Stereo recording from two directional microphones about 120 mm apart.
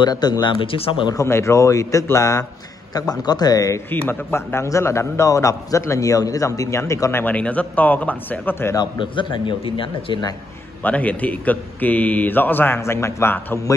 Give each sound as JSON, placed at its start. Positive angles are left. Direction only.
{"t": 0.0, "sound": "speech", "side_deg": 35}
{"t": 1.0, "sound": "a man's voice", "side_deg": 25}
{"t": 3.9, "sound": "a man's voice", "side_deg": 20}
{"t": 8.7, "sound": "a man's voice", "side_deg": 40}
{"t": 10.8, "sound": "a man's voice", "side_deg": 15}